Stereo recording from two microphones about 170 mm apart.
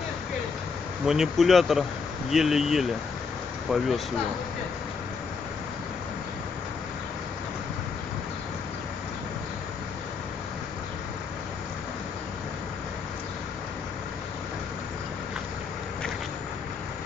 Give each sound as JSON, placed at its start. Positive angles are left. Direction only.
{"t": 1.0, "sound": "speech", "side_deg": -5}